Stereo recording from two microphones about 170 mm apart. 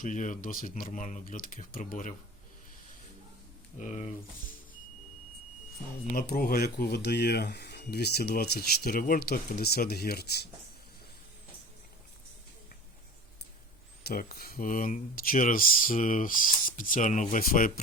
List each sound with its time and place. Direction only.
0.0 s speech: 50° left (ahead or behind)
3.8 s speech: 45° left (ahead or behind)
6.1 s speech: 60° left (ahead or behind)
14.0 s speech: 60° left (ahead or behind)